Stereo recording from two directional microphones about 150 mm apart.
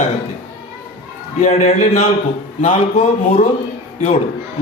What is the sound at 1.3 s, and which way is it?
A man's voice, 50° left (ahead or behind).